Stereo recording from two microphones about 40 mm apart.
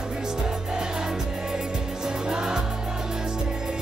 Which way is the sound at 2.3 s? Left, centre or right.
Centre.